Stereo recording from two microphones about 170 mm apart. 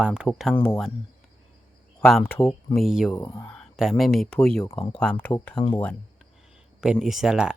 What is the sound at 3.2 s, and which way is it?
Speech, 20° left (ahead or behind).